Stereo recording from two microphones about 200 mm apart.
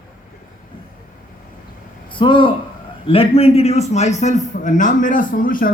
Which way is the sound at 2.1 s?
25° left (ahead or behind).